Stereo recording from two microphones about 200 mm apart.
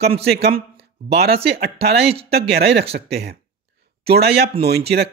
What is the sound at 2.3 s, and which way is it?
Speech, 50° right (ahead or behind).